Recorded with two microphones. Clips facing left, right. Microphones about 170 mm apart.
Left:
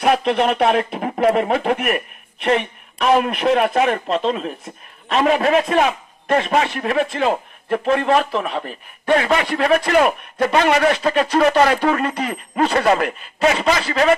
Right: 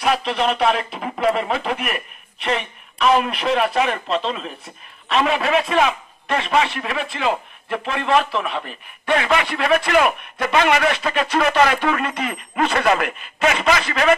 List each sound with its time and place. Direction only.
0.0 s a man's voice: 50° left (ahead or behind); by 14.1 s 30° left (ahead or behind)